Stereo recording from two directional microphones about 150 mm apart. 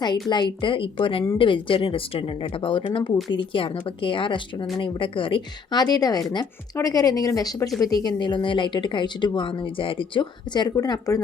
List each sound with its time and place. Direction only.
0.0 s speech: 30° left (ahead or behind)